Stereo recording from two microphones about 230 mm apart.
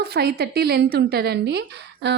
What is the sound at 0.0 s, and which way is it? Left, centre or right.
A woman's voice, right.